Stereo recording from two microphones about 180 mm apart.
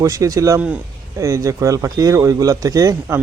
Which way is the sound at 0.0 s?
20° right (ahead or behind).